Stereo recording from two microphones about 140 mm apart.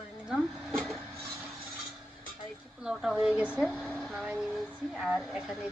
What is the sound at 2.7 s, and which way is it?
A woman's voice, 5° right (ahead or behind).